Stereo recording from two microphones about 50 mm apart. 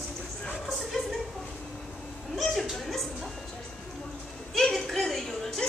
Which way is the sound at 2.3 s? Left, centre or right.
Centre.